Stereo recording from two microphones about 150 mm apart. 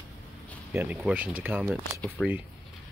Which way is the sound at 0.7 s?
10° right (ahead or behind).